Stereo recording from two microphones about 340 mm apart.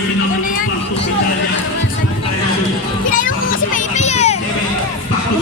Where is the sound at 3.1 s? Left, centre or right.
Left.